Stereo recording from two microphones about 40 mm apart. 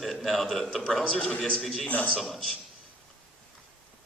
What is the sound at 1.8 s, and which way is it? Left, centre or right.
Speech, left.